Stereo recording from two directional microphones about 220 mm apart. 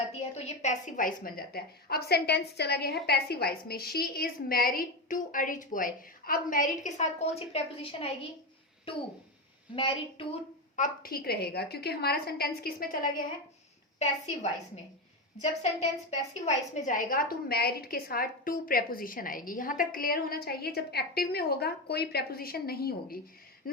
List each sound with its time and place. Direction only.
0.1 s a woman's voice: 30° left (ahead or behind)
10.8 s a woman's voice: 40° left (ahead or behind)
16.0 s a woman's voice: 30° left (ahead or behind)